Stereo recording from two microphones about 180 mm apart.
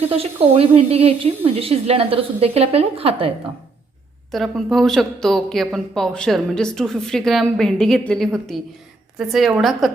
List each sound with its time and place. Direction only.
0.1 s a woman's voice: 30° right (ahead or behind)
4.3 s a woman's voice: centre (ahead or behind)